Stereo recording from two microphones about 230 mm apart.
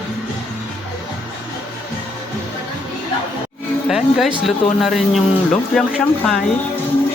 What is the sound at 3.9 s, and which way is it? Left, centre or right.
Speech, centre.